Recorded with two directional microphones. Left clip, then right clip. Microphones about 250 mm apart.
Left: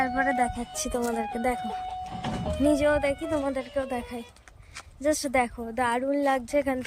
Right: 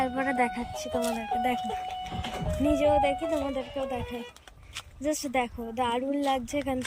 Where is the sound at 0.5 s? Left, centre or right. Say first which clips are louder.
Even; left.